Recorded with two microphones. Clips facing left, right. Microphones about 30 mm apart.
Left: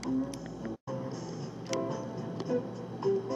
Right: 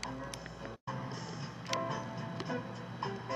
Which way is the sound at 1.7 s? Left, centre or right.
Right.